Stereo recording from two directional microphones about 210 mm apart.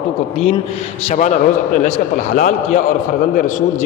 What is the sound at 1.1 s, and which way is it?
A man's voice, 35° left (ahead or behind).